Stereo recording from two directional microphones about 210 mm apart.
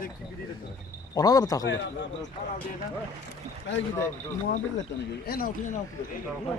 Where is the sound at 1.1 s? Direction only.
15° left (ahead or behind).